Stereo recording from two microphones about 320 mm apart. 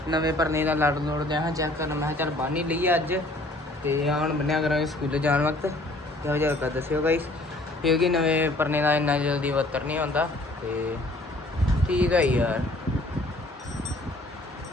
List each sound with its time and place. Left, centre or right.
0.1 s a man's voice: centre
11.9 s speech: centre